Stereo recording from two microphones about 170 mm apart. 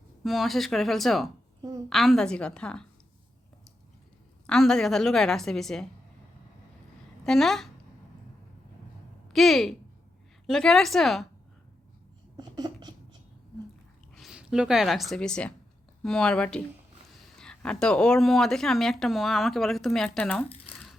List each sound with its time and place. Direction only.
0.2 s speech: centre (ahead or behind)
4.4 s speech: 5° left (ahead or behind)
7.3 s speech: centre (ahead or behind)
9.3 s speech: centre (ahead or behind)
12.4 s a sound: 25° right (ahead or behind)
14.2 s speech: 5° right (ahead or behind)